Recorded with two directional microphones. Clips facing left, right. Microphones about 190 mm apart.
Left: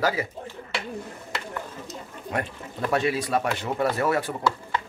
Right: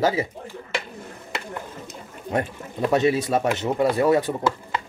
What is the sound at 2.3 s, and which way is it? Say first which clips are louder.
Speech: right 5 dB; 20° right (ahead or behind).